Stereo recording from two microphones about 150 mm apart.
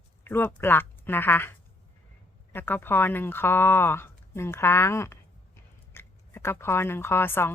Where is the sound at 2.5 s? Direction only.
15° left (ahead or behind).